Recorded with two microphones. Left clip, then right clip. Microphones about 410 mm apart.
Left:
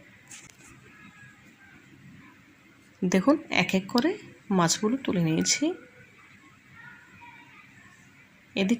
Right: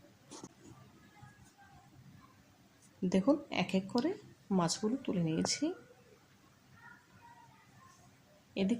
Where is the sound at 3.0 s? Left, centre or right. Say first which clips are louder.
Left 8 dB; left.